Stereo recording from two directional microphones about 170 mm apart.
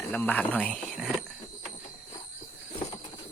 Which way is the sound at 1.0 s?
Centre (ahead or behind).